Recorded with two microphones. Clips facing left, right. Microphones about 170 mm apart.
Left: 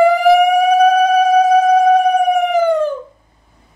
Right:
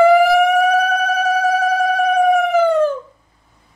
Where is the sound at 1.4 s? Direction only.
20° left (ahead or behind).